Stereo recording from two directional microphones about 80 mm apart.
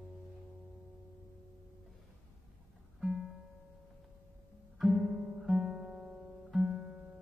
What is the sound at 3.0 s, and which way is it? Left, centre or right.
Music, centre.